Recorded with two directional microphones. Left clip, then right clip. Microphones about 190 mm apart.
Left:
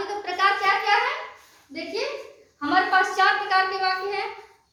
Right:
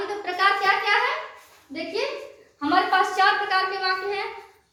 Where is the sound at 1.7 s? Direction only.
15° left (ahead or behind).